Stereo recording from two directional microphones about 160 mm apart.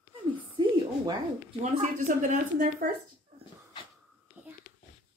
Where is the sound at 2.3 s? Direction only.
55° right (ahead or behind).